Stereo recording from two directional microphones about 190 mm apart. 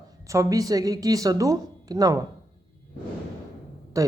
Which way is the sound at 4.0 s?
15° right (ahead or behind).